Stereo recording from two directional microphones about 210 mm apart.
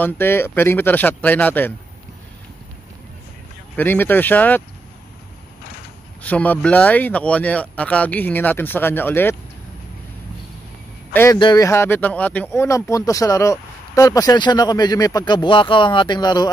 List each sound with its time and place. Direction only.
0.0 s speech: 10° left (ahead or behind)
3.7 s speech: 10° left (ahead or behind)
6.2 s speech: 5° left (ahead or behind)
11.3 s speech: 20° left (ahead or behind)